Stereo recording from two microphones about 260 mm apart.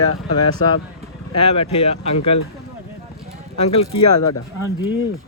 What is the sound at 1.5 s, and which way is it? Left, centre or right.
Speech, left.